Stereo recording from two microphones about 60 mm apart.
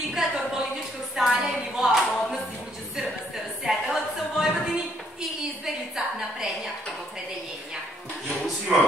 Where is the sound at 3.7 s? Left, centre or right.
Centre.